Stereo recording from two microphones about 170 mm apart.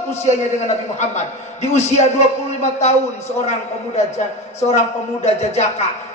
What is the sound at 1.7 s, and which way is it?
A man's voice, 40° left (ahead or behind).